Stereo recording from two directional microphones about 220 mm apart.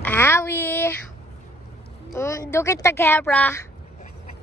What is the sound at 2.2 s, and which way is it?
A woman's voice, 15° left (ahead or behind).